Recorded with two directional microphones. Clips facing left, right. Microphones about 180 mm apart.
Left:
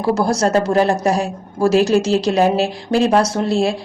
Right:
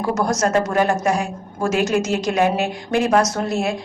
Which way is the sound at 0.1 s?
30° left (ahead or behind).